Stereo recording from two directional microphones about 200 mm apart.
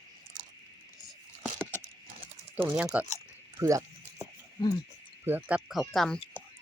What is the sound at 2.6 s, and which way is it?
Speech, 10° right (ahead or behind).